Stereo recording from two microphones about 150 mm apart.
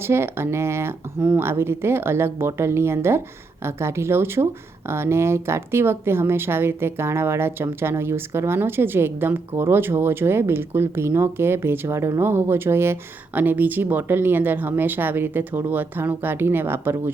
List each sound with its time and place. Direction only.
0.0 s speech: 15° right (ahead or behind)